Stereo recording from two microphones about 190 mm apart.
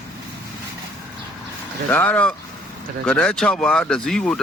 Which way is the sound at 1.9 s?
10° left (ahead or behind).